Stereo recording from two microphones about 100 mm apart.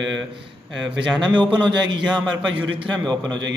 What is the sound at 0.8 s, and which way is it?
A man's voice, 5° right (ahead or behind).